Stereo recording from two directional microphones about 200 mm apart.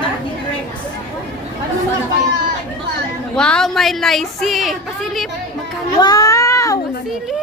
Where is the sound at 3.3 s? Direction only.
5° left (ahead or behind).